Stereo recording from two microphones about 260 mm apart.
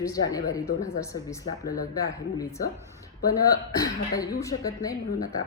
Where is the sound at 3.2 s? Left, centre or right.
Centre.